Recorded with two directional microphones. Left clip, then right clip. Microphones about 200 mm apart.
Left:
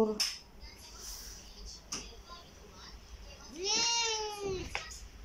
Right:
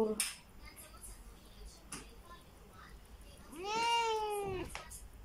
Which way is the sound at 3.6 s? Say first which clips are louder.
Left 2 dB; 30° right (ahead or behind).